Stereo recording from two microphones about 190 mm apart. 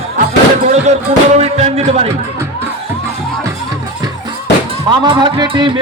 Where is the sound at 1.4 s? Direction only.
35° right (ahead or behind).